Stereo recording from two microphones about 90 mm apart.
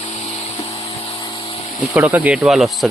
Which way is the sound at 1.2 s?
65° left (ahead or behind).